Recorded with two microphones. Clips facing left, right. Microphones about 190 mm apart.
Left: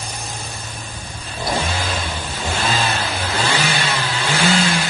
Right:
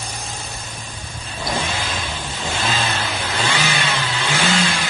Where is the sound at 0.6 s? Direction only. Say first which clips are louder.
Left 1 dB; 55° left (ahead or behind).